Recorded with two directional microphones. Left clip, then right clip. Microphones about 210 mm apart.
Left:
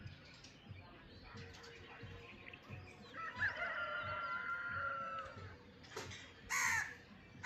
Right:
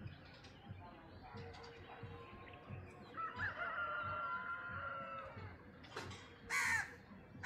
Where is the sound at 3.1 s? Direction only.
45° left (ahead or behind).